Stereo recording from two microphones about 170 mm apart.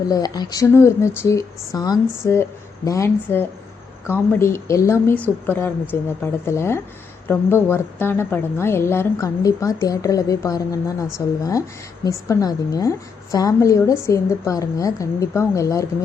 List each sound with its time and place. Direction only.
0.1 s a woman's voice: 20° left (ahead or behind)